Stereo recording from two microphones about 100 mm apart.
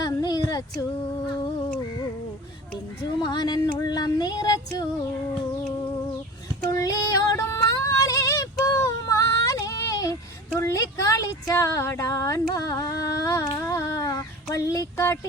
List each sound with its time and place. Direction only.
0.0 s female singing: 40° left (ahead or behind)
3.0 s child singing: 45° left (ahead or behind)
6.7 s female singing: 35° left (ahead or behind)
10.6 s a sound: 30° left (ahead or behind)
13.6 s humming: 35° left (ahead or behind)
14.5 s a sound: 35° left (ahead or behind)